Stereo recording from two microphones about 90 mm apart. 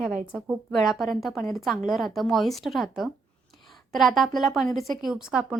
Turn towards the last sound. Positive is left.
turn(degrees=-10)  # may be behind; listen again after turning